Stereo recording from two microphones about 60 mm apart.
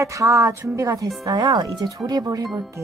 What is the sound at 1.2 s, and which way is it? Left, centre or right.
Speech, right.